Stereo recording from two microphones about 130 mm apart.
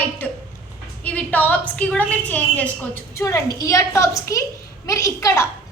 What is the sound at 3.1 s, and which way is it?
A woman's voice, 25° left (ahead or behind).